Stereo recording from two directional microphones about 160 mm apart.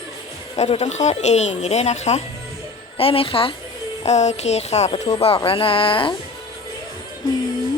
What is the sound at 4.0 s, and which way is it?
Speech, 45° left (ahead or behind).